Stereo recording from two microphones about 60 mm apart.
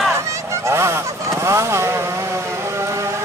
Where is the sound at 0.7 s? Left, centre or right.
Right.